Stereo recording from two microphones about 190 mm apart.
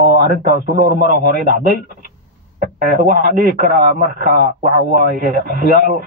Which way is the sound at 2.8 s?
50° right (ahead or behind).